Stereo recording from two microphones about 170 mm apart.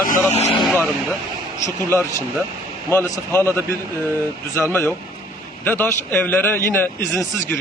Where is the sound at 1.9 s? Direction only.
15° left (ahead or behind).